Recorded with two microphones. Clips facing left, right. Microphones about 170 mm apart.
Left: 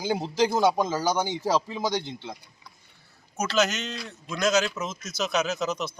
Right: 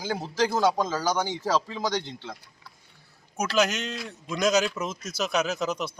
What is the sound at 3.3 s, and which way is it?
A man's voice, 10° right (ahead or behind).